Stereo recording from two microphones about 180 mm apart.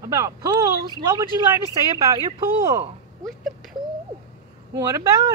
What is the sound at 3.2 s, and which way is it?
Speech, centre (ahead or behind).